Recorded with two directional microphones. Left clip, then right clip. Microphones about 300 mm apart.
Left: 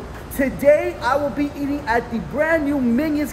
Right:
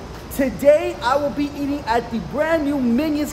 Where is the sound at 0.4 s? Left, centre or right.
Centre.